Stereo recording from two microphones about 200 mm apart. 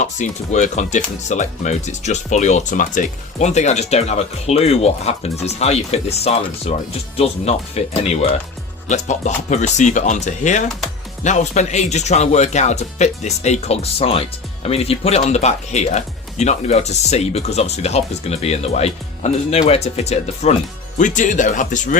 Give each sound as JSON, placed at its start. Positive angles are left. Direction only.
{"t": 0.0, "sound": "speech", "side_deg": 35}